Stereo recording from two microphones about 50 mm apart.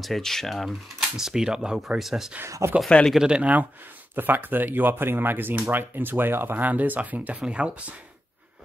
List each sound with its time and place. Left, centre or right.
0.0 s speech: centre
2.4 s speech: right
3.2 s speech: centre
4.1 s speech: right